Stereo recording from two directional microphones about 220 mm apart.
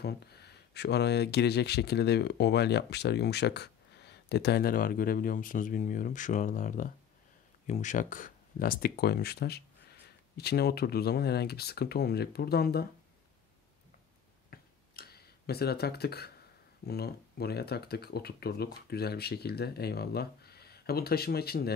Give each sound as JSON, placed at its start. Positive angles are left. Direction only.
{"t": 0.0, "sound": "speech", "side_deg": 50}
{"t": 14.5, "sound": "tick-tock", "side_deg": 45}
{"t": 16.8, "sound": "speech", "side_deg": 45}